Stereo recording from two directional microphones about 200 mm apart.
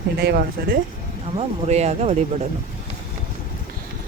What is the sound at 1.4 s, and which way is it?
Speech, 35° right (ahead or behind).